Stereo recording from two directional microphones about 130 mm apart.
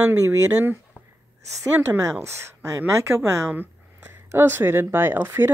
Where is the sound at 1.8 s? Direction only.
25° right (ahead or behind).